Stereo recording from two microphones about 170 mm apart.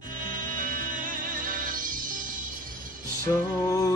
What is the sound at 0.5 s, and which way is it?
Music, 55° right (ahead or behind).